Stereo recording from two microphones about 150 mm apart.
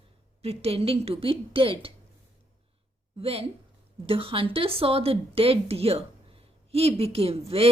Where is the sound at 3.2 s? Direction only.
40° right (ahead or behind).